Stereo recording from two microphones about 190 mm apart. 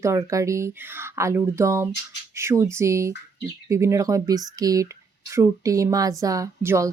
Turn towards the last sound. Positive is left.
turn(degrees=-15)  # may be behind; listen again after turning